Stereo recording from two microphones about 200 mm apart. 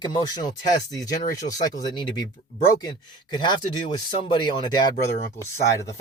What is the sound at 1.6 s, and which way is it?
Speech, 20° left (ahead or behind).